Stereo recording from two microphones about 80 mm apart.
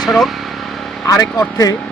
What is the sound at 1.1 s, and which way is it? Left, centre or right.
Speech, left.